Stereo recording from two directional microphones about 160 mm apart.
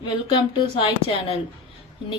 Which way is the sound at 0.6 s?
35° left (ahead or behind).